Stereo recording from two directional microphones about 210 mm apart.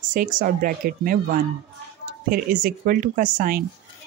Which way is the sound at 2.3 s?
45° right (ahead or behind).